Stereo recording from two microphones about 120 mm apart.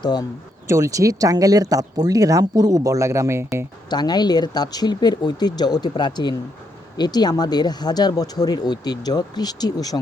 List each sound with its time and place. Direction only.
0.0 s speech: 35° left (ahead or behind)
0.7 s speech: 25° right (ahead or behind)
3.8 s speech: 35° left (ahead or behind)